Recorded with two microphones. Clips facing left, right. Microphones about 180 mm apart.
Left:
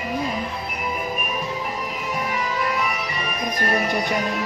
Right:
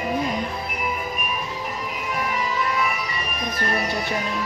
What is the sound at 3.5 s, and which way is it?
Speech, 15° left (ahead or behind).